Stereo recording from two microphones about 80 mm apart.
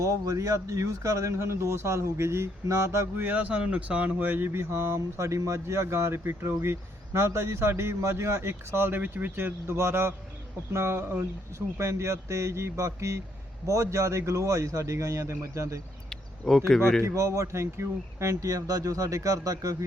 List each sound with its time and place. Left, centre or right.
0.0 s speech: right
3.2 s speech: centre; by 15.8 s right
16.0 s cricket: centre
17.0 s speech: right